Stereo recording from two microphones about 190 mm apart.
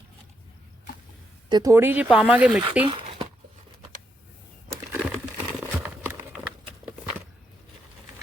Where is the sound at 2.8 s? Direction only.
30° right (ahead or behind).